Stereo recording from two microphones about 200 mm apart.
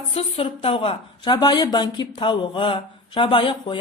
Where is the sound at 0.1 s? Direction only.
30° left (ahead or behind).